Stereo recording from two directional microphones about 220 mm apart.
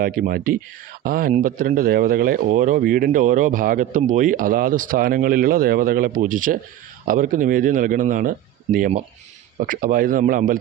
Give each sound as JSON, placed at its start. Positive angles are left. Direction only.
{"t": 0.0, "sound": "a man's voice", "side_deg": -40}